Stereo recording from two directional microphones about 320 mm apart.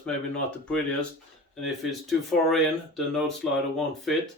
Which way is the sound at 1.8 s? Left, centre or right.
Centre.